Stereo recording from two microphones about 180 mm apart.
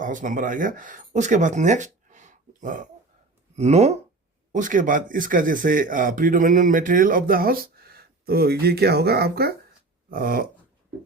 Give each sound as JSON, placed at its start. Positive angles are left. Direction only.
{"t": 0.0, "sound": "speech", "side_deg": -45}